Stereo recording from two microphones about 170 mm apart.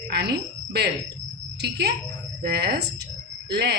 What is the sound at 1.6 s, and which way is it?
A woman's voice, 75° right (ahead or behind).